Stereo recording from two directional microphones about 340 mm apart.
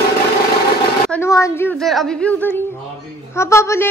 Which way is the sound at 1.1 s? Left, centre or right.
Centre.